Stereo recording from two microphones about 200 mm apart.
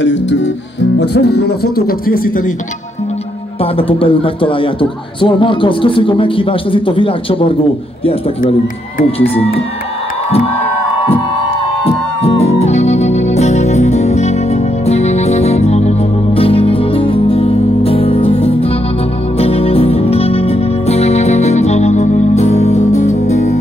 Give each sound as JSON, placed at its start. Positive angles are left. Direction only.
{"t": 0.0, "sound": "music", "side_deg": 65}
{"t": 0.9, "sound": "speech", "side_deg": 55}
{"t": 3.7, "sound": "a man's voice", "side_deg": 25}
{"t": 9.2, "sound": "a man's voice", "side_deg": 30}
{"t": 11.8, "sound": "music", "side_deg": 30}